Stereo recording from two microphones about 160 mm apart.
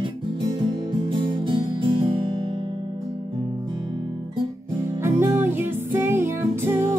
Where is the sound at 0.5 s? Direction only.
30° right (ahead or behind).